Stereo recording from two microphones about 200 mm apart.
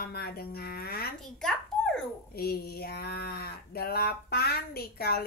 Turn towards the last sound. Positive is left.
turn(degrees=50)  # may be behind; listen again after turning